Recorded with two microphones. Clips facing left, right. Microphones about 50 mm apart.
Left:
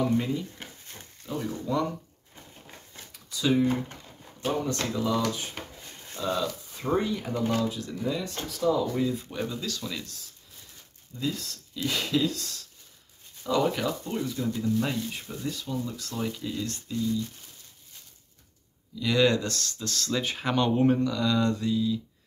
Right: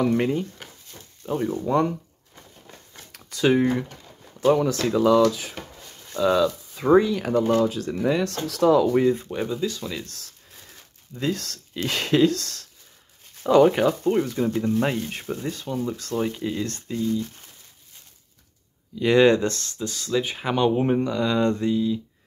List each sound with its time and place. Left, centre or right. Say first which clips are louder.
0.0 s speech: right 5 dB; right
1.2 s speech: right 7 dB; right
3.1 s a sound: right 6 dB; right
4.8 s speech: right 12 dB; right
6.1 s speech: right 9 dB; right
9.2 s speech: right 6 dB; right
10.0 s speech: right 3 dB; right
18.9 s speech: right 7 dB; right
19.8 s speech: right 6 dB; centre